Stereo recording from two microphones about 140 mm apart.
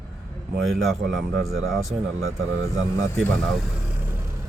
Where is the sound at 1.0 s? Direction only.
90° right.